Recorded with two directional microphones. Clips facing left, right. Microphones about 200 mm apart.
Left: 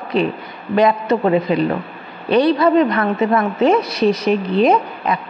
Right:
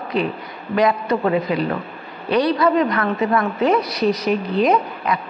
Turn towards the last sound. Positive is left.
turn(degrees=25)  # may be behind; listen again after turning